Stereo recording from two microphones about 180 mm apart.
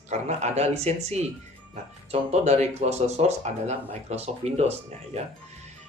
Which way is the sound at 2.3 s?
40° right (ahead or behind).